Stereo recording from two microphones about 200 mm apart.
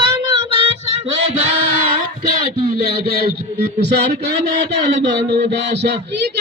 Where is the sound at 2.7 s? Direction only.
50° right (ahead or behind).